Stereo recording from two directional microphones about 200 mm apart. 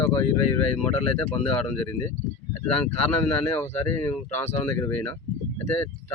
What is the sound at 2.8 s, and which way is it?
Speech, 10° left (ahead or behind).